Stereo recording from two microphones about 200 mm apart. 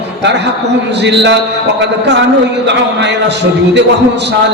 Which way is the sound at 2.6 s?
60° right (ahead or behind).